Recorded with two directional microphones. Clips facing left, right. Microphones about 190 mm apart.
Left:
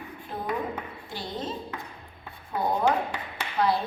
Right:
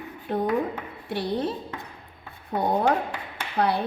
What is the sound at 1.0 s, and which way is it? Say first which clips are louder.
Speech: right 9 dB; 65° right (ahead or behind).